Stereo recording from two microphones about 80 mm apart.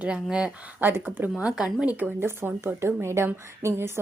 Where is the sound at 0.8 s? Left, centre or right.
Right.